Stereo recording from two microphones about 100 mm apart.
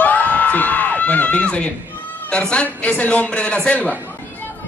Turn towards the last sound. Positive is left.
turn(degrees=10)  # may be behind; listen again after turning